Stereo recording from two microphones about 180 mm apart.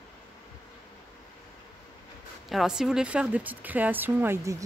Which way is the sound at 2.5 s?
Centre (ahead or behind).